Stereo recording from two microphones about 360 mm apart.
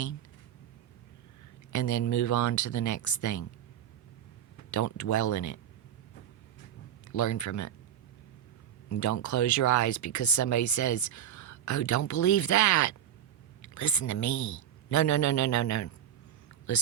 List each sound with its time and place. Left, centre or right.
1.7 s speech: left
4.7 s speech: left
7.1 s speech: left
8.9 s a man's voice: left